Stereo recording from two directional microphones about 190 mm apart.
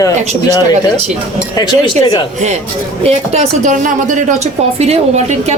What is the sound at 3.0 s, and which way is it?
A woman's voice, 30° right (ahead or behind).